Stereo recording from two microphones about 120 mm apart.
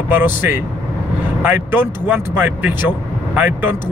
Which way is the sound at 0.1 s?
15° right (ahead or behind).